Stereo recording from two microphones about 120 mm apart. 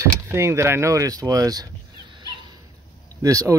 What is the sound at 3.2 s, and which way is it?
Speech, 25° right (ahead or behind).